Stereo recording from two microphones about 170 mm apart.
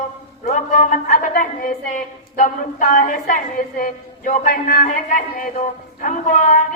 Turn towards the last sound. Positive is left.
turn(degrees=45)  # may be behind; listen again after turning